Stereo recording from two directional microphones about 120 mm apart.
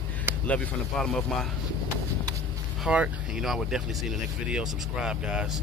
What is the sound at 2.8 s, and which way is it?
Speech, 10° right (ahead or behind).